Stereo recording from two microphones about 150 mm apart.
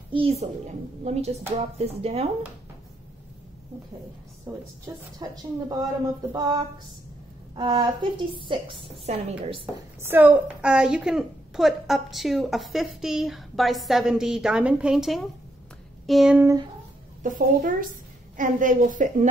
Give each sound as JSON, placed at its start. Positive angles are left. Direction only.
{"t": 0.1, "sound": "a woman's voice", "side_deg": -40}
{"t": 4.5, "sound": "a woman's voice", "side_deg": -20}
{"t": 10.0, "sound": "a woman's voice", "side_deg": -10}
{"t": 17.2, "sound": "a woman's voice", "side_deg": -65}